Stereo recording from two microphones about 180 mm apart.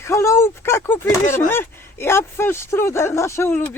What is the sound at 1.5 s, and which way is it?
Speech, 10° left (ahead or behind).